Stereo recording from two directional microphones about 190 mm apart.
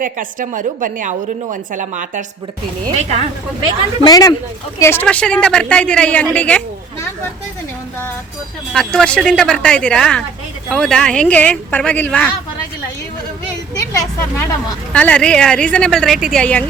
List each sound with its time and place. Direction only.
0.0 s a woman's voice: 45° right (ahead or behind)
4.0 s a woman's voice: 20° left (ahead or behind)
8.7 s a woman's voice: 5° left (ahead or behind)
13.9 s a woman's voice: 15° left (ahead or behind)